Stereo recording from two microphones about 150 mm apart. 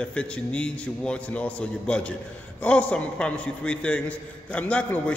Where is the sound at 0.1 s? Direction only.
5° left (ahead or behind).